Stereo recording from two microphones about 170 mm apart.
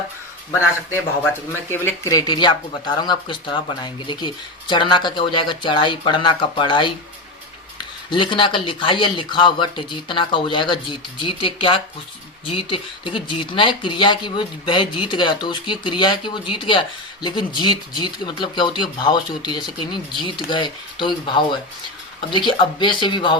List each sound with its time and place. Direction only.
1.7 s speech: 15° left (ahead or behind); by 6.9 s 30° left (ahead or behind)
8.1 s speech: 30° left (ahead or behind)